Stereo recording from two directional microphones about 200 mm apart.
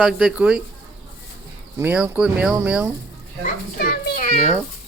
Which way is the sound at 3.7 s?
50° left (ahead or behind).